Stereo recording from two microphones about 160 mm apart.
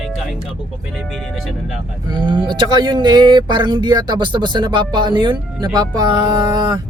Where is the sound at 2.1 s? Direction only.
30° right (ahead or behind).